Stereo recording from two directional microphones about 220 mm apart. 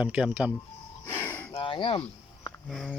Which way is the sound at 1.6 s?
20° left (ahead or behind).